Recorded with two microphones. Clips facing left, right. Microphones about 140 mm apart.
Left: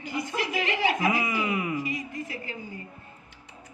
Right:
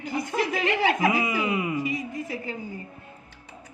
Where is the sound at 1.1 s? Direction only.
25° right (ahead or behind).